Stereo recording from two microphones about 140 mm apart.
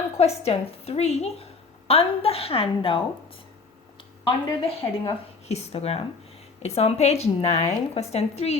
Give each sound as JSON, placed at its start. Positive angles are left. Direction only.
{"t": 0.2, "sound": "a woman's voice", "side_deg": 45}
{"t": 4.2, "sound": "a woman's voice", "side_deg": 35}
{"t": 5.5, "sound": "a woman's voice", "side_deg": 50}